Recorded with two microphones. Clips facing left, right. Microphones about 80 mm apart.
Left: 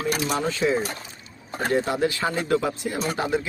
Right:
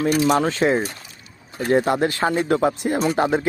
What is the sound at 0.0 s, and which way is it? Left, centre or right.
Speech, right.